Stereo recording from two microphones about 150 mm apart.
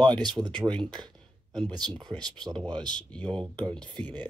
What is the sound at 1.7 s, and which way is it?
Speech, 30° right (ahead or behind).